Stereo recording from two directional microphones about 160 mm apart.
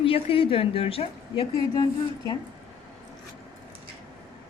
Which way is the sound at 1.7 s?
25° left (ahead or behind).